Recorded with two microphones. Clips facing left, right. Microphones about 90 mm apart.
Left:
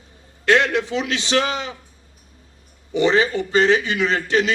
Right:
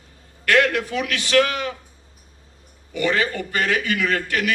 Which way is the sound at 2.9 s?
20° left (ahead or behind).